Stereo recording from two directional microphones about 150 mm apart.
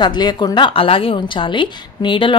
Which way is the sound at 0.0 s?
30° left (ahead or behind).